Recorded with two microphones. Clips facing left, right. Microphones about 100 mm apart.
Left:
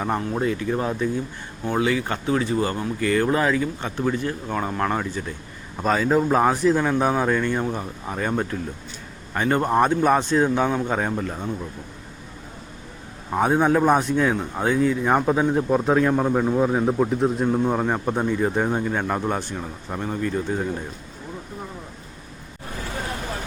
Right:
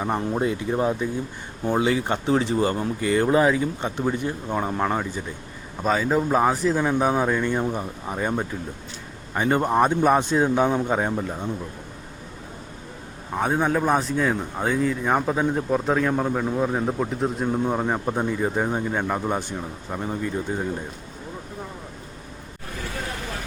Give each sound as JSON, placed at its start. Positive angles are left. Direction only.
{"t": 0.2, "sound": "speech", "side_deg": -20}
{"t": 1.7, "sound": "speech", "side_deg": -25}
{"t": 5.8, "sound": "a man's voice", "side_deg": 0}
{"t": 9.6, "sound": "a man's voice", "side_deg": 0}
{"t": 10.2, "sound": "speech", "side_deg": -10}
{"t": 13.3, "sound": "a man's voice", "side_deg": 5}
{"t": 19.5, "sound": "speech", "side_deg": -20}